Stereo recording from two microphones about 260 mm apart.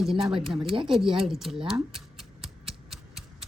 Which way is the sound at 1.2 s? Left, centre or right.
Centre.